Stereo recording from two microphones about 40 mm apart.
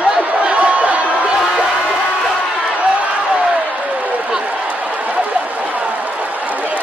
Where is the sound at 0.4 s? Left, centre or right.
Right.